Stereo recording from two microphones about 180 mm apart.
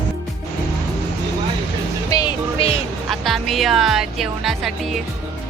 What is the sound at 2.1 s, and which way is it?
Music, 25° left (ahead or behind).